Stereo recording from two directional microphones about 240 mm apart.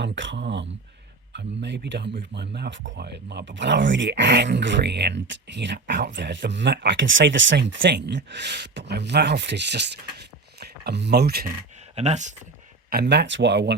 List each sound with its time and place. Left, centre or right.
0.0 s speech: right
11.9 s speech: right
12.9 s speech: right